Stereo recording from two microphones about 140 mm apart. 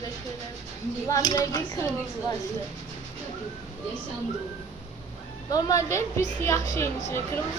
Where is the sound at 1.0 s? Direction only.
25° left (ahead or behind).